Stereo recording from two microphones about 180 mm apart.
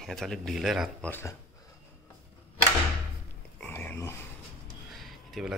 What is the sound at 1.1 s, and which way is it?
Speech, 15° left (ahead or behind).